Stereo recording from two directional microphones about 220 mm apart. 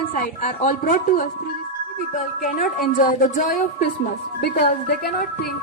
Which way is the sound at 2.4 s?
35° left (ahead or behind).